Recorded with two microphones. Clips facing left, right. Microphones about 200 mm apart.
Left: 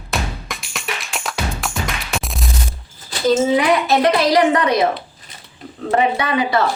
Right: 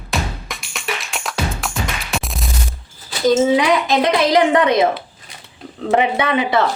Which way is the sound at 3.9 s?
20° right (ahead or behind).